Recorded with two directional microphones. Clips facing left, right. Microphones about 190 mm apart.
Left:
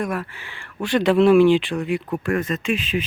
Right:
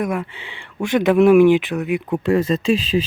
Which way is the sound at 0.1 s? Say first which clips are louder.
Right 3 dB; 20° right (ahead or behind).